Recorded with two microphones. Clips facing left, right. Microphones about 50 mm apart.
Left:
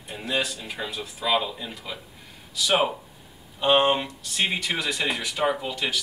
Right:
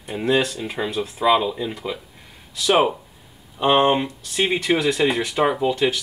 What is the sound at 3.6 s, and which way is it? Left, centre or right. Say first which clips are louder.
Speech: right 3 dB; centre.